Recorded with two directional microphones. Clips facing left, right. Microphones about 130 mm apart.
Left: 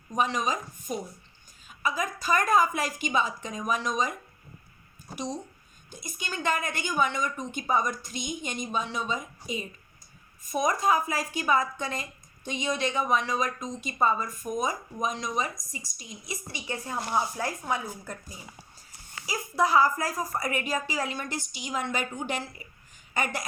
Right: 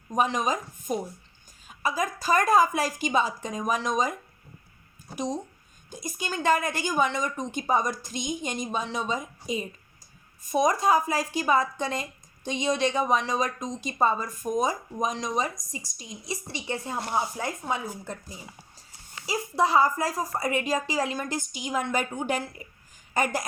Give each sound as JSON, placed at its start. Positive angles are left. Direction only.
{"t": 0.2, "sound": "a woman's voice", "side_deg": -45}
{"t": 5.1, "sound": "a woman's voice", "side_deg": -40}
{"t": 19.2, "sound": "a woman's voice", "side_deg": -30}
{"t": 23.1, "sound": "a woman's voice", "side_deg": -40}